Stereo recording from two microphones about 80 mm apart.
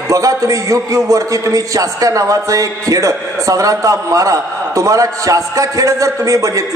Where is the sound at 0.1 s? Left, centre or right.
Right.